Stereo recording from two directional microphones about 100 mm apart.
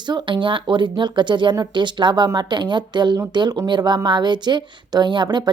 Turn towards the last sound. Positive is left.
turn(degrees=-50)  # may be behind; listen again after turning